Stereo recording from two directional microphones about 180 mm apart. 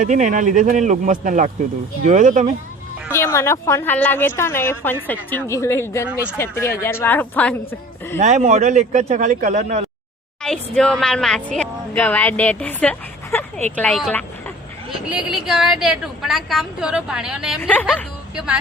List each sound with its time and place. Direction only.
0.0 s speech: 45° right (ahead or behind)
3.1 s speech: 15° left (ahead or behind)
8.2 s speech: 40° right (ahead or behind)
10.4 s a woman's voice: 5° left (ahead or behind)
17.6 s speech: 10° left (ahead or behind)